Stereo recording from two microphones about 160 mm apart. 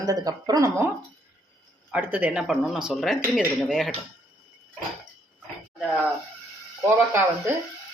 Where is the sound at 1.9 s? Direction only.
10° right (ahead or behind).